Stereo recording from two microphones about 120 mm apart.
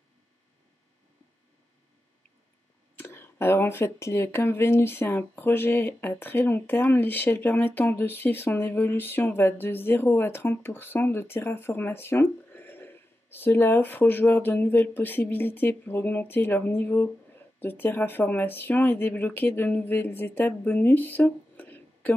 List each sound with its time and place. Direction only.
3.0 s speech: 20° left (ahead or behind)